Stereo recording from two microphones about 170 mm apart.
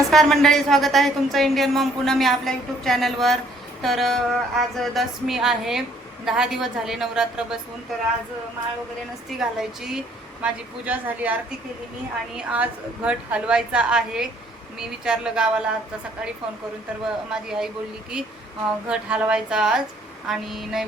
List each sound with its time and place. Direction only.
0.0 s speech: centre (ahead or behind)
9.4 s a woman's voice: 5° right (ahead or behind)
17.3 s speech: 5° right (ahead or behind)
18.9 s speech: 5° right (ahead or behind)